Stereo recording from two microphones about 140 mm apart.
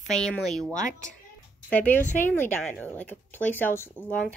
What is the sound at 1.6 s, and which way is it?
Speech, 10° left (ahead or behind).